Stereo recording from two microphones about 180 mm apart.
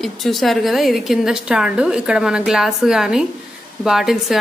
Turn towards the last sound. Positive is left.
turn(degrees=0)  # may be behind; listen again after turning